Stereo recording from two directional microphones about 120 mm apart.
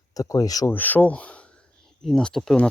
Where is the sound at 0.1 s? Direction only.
30° left (ahead or behind).